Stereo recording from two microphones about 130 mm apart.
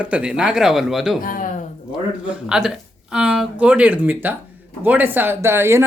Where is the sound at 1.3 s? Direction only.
90° left.